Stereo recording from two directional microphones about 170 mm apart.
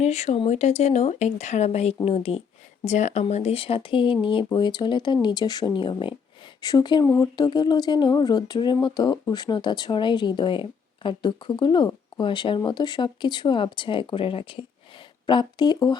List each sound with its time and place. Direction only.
0.0 s speech: 40° left (ahead or behind); by 16.0 s 25° left (ahead or behind)